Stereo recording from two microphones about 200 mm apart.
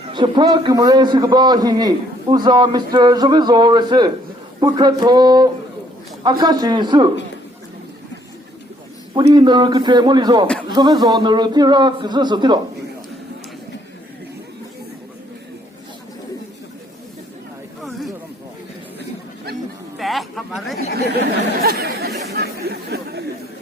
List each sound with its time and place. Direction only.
0.0 s a man's voice: 25° right (ahead or behind)
9.1 s a man's voice: 25° right (ahead or behind)
20.0 s a sound: centre (ahead or behind)
20.9 s chatter: 50° right (ahead or behind)